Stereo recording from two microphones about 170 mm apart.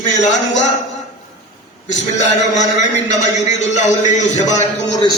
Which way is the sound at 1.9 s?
45° left (ahead or behind).